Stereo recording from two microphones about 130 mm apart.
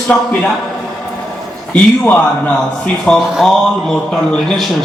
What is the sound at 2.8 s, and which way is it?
A man's voice, 5° left (ahead or behind).